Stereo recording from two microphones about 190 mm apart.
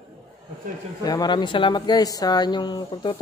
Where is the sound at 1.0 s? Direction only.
20° left (ahead or behind).